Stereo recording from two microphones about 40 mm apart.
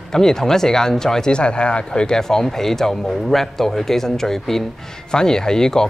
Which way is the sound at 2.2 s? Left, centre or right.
Centre.